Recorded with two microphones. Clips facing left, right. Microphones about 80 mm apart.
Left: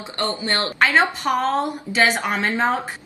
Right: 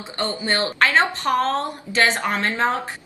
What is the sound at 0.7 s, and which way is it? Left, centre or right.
A woman's voice, centre.